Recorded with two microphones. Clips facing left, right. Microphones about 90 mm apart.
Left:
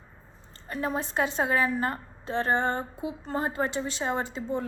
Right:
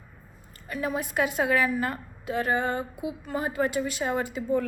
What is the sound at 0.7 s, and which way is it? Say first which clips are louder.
A woman's voice: even; 30° left (ahead or behind).